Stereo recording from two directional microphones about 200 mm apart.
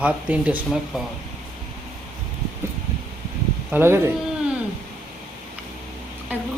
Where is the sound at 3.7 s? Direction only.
10° right (ahead or behind).